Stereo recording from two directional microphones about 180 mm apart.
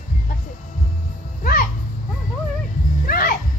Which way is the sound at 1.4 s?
55° left (ahead or behind).